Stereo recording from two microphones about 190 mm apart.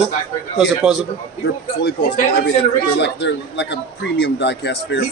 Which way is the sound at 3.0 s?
65° left (ahead or behind).